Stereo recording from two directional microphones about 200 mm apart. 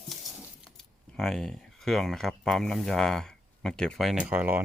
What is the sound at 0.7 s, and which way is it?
Speech, centre (ahead or behind).